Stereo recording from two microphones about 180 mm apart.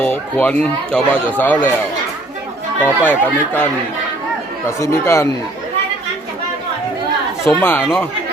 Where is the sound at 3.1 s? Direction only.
10° left (ahead or behind).